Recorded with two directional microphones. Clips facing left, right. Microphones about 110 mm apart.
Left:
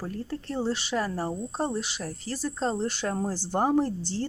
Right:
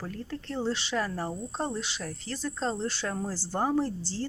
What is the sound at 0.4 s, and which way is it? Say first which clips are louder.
Speech: left 1 dB; 15° left (ahead or behind).